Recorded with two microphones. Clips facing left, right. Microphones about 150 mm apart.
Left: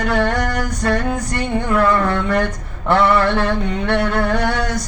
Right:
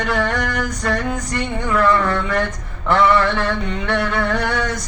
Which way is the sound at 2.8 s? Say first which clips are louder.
Left 1 dB; 35° left (ahead or behind).